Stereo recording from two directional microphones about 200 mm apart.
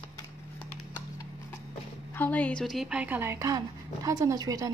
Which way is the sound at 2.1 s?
10° left (ahead or behind).